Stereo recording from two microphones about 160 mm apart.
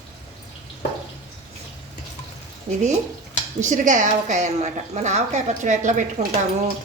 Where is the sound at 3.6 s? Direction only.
50° right (ahead or behind).